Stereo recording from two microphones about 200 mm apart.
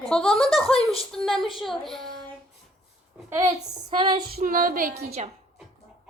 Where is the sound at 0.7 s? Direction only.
30° left (ahead or behind).